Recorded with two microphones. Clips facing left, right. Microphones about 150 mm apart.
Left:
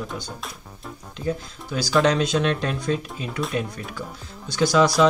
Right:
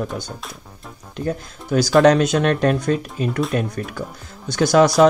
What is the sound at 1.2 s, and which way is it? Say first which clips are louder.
Speech: right 2 dB; 55° right (ahead or behind).